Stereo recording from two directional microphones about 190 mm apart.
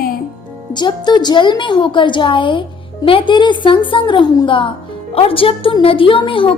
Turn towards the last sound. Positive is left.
turn(degrees=25)  # may be behind; listen again after turning